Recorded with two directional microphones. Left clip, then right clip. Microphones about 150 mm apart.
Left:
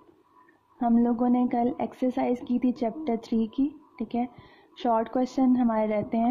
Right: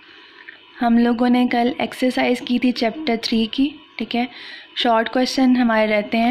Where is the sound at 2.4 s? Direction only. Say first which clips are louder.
Right 8 dB; 5° left (ahead or behind).